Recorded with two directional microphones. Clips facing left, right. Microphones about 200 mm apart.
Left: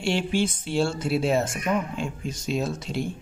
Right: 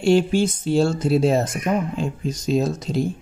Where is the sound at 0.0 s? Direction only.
40° right (ahead or behind).